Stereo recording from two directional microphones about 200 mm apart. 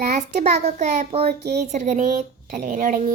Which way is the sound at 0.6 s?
35° right (ahead or behind).